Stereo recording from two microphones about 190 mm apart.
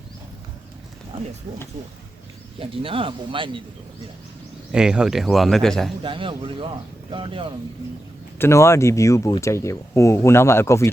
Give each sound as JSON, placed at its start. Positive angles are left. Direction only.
{"t": 2.6, "sound": "speech", "side_deg": -30}
{"t": 4.7, "sound": "speech", "side_deg": -5}
{"t": 6.0, "sound": "speech", "side_deg": -25}
{"t": 8.4, "sound": "speech", "side_deg": 15}